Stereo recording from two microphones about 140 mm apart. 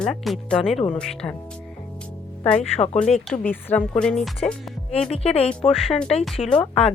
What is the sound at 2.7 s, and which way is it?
Speech, 50° left (ahead or behind).